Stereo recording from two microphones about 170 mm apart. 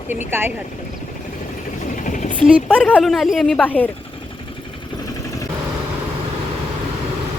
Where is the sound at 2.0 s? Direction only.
45° left (ahead or behind).